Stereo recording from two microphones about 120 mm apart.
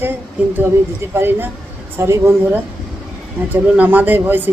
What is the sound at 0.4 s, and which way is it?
A woman's voice, 15° right (ahead or behind).